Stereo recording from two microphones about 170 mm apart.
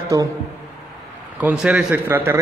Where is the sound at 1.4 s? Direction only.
5° right (ahead or behind).